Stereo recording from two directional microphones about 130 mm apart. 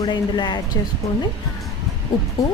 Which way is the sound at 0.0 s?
35° left (ahead or behind).